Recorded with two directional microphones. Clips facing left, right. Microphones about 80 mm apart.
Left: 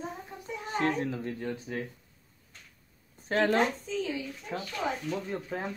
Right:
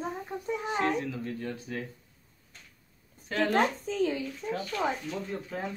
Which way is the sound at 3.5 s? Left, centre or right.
Right.